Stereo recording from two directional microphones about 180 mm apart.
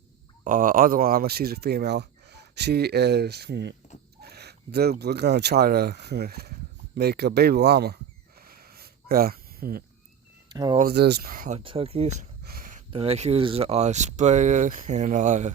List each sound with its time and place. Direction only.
0.4 s speech: 45° right (ahead or behind); by 7.9 s 65° right (ahead or behind)
8.4 s a sound: 55° right (ahead or behind)
10.5 s speech: 25° right (ahead or behind)
10.8 s speech: 60° right (ahead or behind)
11.5 s speech: 30° right (ahead or behind)
12.4 s a sound: 55° right (ahead or behind)
12.9 s speech: 30° right (ahead or behind)